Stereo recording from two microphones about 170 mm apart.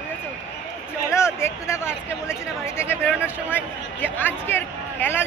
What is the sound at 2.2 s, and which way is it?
Speech, 15° left (ahead or behind).